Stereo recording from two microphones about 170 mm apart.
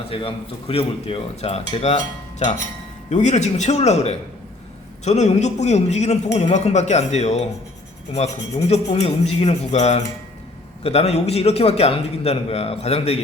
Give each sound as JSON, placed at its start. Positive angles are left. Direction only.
{"t": 0.1, "sound": "a man's voice", "side_deg": 35}
{"t": 3.1, "sound": "a man's voice", "side_deg": 45}